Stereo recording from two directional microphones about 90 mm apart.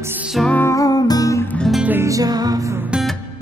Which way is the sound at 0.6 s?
40° left (ahead or behind).